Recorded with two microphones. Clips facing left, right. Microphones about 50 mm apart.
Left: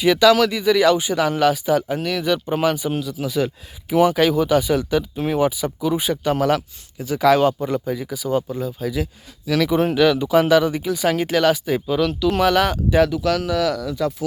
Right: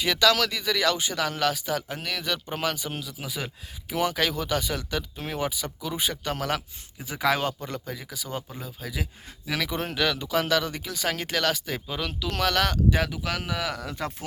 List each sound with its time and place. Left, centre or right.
0.0 s speech: centre
3.1 s speech: centre
3.8 s speech: centre
7.0 s speech: centre
7.4 s speech: centre
9.6 s speech: centre
11.9 s speech: centre
12.3 s speech: centre
13.0 s speech: centre
13.7 s speech: right